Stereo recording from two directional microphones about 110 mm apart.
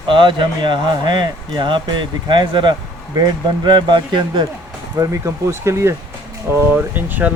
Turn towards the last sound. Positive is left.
turn(degrees=-15)  # may be behind; listen again after turning